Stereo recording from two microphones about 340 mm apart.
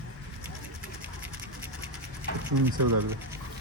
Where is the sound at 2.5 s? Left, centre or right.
Right.